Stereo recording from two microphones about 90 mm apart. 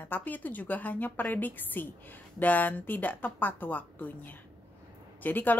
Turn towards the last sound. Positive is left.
turn(degrees=20)  # may be behind; listen again after turning